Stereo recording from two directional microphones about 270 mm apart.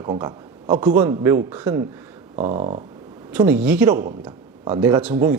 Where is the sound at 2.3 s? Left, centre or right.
Right.